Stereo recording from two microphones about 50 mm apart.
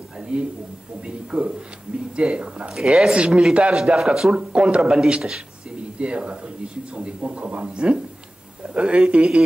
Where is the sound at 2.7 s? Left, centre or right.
Centre.